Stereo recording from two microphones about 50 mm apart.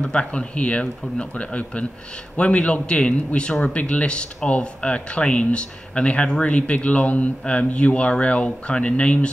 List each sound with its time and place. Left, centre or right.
0.0 s speech: centre